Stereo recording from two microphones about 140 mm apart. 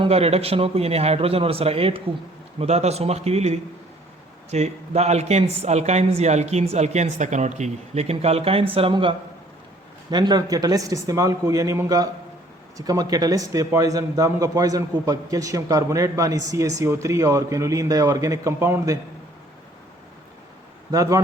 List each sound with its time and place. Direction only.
0.0 s a man's voice: 45° right (ahead or behind); by 18.9 s 20° right (ahead or behind)
20.9 s a man's voice: 25° right (ahead or behind)